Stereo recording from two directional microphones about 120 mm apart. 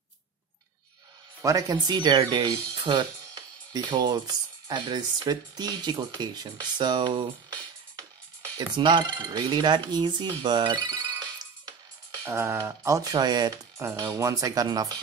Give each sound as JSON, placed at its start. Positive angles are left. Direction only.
{"t": 1.4, "sound": "speech", "side_deg": -30}
{"t": 12.3, "sound": "speech", "side_deg": -25}
{"t": 13.8, "sound": "speech", "side_deg": -25}